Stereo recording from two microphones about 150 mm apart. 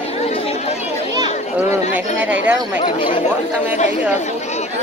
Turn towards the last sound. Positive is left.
turn(degrees=40)  # may be behind; listen again after turning